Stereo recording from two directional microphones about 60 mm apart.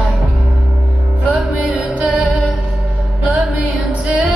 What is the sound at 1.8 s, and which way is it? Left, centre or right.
Music, right.